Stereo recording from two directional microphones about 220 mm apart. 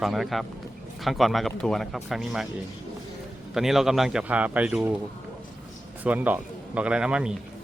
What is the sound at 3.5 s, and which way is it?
A man's voice, centre (ahead or behind).